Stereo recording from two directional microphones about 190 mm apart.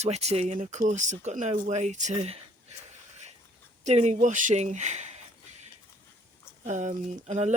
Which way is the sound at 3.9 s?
35° right (ahead or behind).